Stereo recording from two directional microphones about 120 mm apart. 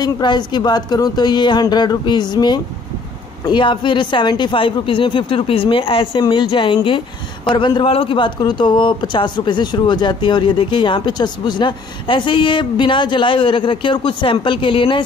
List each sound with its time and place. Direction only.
0.0 s a man's voice: 40° left (ahead or behind)